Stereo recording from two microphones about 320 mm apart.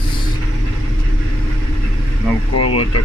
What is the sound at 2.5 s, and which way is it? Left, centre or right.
Speech, left.